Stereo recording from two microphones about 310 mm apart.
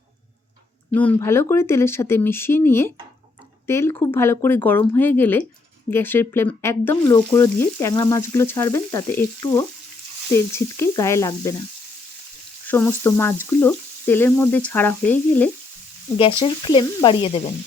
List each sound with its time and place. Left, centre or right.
0.9 s frying: centre
12.6 s frying: centre